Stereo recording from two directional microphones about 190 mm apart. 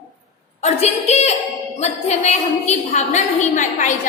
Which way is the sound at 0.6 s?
35° left (ahead or behind).